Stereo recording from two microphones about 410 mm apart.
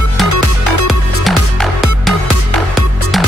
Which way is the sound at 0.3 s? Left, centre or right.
Left.